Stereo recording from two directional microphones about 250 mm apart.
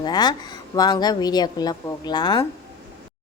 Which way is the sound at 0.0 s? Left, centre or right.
Centre.